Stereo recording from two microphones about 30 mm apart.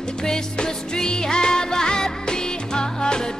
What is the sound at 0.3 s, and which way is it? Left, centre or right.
Music, left.